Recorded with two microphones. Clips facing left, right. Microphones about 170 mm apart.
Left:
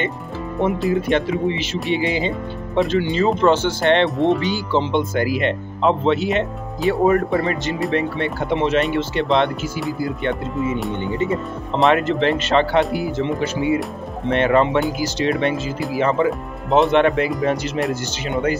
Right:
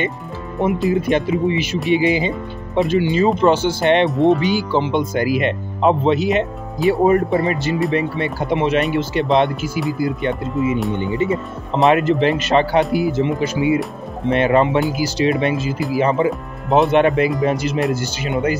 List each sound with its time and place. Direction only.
0.6 s speech: centre (ahead or behind)
4.1 s speech: centre (ahead or behind)
4.4 s speech: 15° right (ahead or behind)
11.9 s speech: 10° right (ahead or behind)